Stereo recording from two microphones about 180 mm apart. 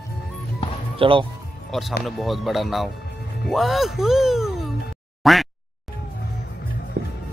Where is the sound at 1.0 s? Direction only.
30° right (ahead or behind).